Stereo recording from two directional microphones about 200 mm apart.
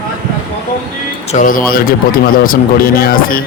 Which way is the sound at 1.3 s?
40° left (ahead or behind).